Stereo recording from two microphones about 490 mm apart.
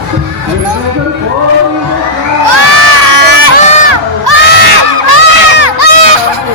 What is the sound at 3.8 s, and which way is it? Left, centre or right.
Crowd, right.